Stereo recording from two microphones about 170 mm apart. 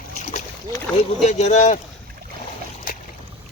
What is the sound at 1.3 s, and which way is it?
Speech, 40° left (ahead or behind).